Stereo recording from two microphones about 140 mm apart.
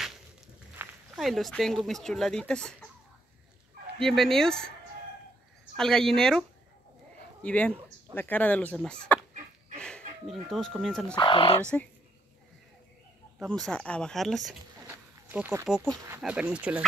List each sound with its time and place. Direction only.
0.8 s a sound: 15° right (ahead or behind)
1.1 s speech: centre (ahead or behind)
4.0 s speech: 5° left (ahead or behind)
5.8 s speech: 5° left (ahead or behind)
7.4 s speech: 10° left (ahead or behind)
11.1 s speech: 40° left (ahead or behind)
13.5 s speech: 5° left (ahead or behind)
15.2 s speech: 15° right (ahead or behind)
16.2 s speech: 10° right (ahead or behind)